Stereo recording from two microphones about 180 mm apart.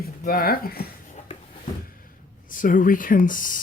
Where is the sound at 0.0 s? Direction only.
55° left (ahead or behind).